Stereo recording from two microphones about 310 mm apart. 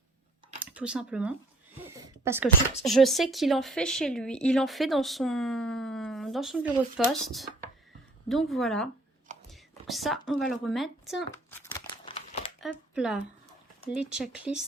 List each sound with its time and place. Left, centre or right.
0.6 s speech: centre
9.5 s a sound: centre
12.9 s speech: centre